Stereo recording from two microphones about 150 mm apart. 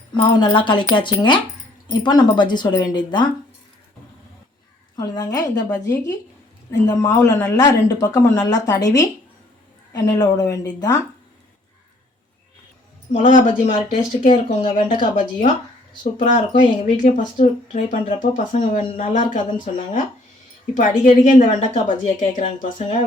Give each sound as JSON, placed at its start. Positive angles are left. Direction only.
{"t": 0.2, "sound": "speech", "side_deg": 30}
{"t": 4.9, "sound": "speech", "side_deg": 25}
{"t": 13.1, "sound": "speech", "side_deg": 55}
{"t": 14.8, "sound": "speech", "side_deg": 35}
{"t": 15.1, "sound": "speech", "side_deg": 60}
{"t": 22.6, "sound": "speech", "side_deg": 40}